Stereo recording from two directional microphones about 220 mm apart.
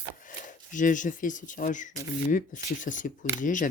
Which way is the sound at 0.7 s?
35° left (ahead or behind).